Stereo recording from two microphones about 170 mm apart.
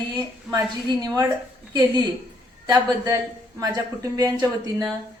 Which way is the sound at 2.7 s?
20° right (ahead or behind).